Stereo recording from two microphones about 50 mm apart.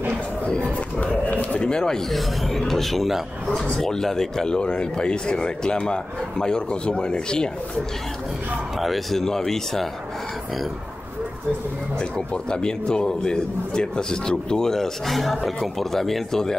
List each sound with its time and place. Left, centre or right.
1.2 s a sound: left
1.7 s a man's voice: centre
2.0 s a man's voice: centre
8.7 s a man's voice: centre
12.0 s a man's voice: centre